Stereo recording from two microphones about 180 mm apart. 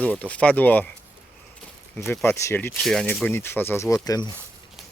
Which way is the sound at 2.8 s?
5° left (ahead or behind).